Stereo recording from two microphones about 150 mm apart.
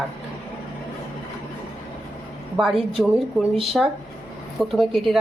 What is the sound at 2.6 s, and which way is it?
Speech, centre (ahead or behind).